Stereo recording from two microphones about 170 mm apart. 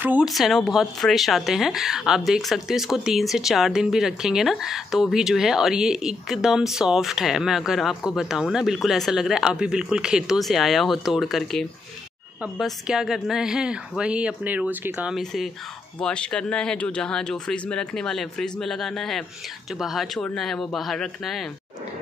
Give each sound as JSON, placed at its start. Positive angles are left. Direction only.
{"t": 0.0, "sound": "speech", "side_deg": -5}